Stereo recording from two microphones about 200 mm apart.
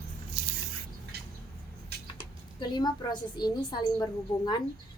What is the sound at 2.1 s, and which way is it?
A woman's voice, 20° left (ahead or behind).